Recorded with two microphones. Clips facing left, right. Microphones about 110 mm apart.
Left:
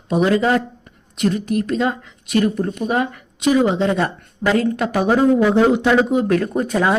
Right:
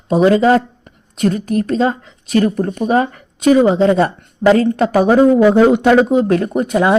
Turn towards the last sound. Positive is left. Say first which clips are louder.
# right 4 dB
turn(degrees=-20)  # may be behind; listen again after turning